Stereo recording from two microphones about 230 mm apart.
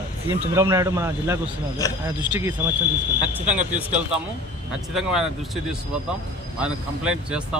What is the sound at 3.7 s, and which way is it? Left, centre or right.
A man's voice, centre.